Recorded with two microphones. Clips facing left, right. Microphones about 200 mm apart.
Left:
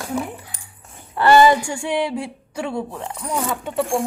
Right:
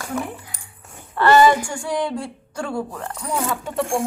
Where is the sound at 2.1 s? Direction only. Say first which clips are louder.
Left 1 dB; 5° left (ahead or behind).